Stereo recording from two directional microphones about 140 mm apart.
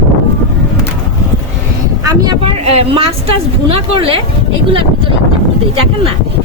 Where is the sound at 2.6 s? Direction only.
45° right (ahead or behind).